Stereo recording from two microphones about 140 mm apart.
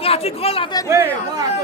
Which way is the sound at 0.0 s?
45° left (ahead or behind).